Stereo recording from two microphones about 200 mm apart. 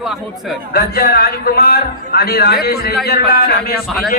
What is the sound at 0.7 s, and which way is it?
Speech, 50° left (ahead or behind).